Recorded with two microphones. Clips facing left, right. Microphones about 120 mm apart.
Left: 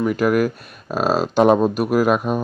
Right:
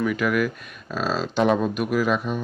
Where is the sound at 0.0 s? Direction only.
40° left (ahead or behind).